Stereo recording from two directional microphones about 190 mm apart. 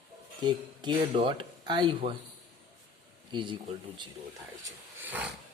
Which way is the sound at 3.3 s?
25° right (ahead or behind).